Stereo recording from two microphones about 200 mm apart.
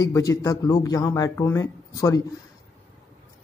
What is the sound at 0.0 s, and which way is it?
Speech, 15° left (ahead or behind).